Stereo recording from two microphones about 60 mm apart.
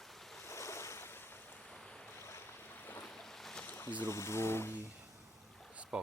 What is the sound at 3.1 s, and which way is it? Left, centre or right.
Boat, centre.